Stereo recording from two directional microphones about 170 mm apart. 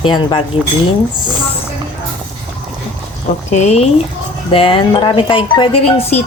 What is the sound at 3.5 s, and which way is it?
Speech, 40° left (ahead or behind).